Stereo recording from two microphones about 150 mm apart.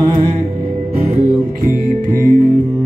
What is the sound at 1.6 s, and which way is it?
Music, 70° right (ahead or behind).